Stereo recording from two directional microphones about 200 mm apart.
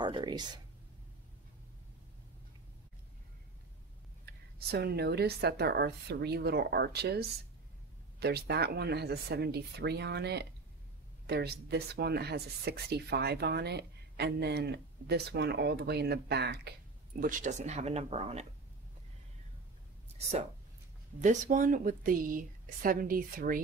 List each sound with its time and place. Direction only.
0.0 s speech: 25° right (ahead or behind)
4.3 s speech: 55° right (ahead or behind)
17.2 s speech: 40° right (ahead or behind)
21.2 s speech: 40° right (ahead or behind)